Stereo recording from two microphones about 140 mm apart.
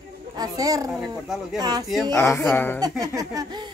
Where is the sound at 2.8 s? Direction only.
25° right (ahead or behind).